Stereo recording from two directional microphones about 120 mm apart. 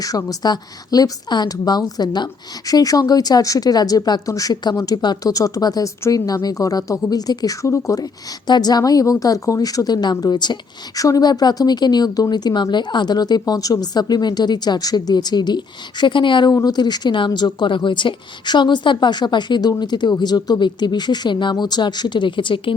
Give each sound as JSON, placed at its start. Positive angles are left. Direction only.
{"t": 0.0, "sound": "a woman's voice", "side_deg": 30}
{"t": 16.5, "sound": "a woman's voice", "side_deg": 30}